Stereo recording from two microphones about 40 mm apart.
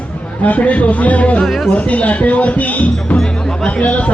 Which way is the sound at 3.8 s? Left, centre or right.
Left.